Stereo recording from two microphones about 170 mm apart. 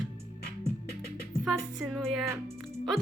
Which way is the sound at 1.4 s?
Centre (ahead or behind).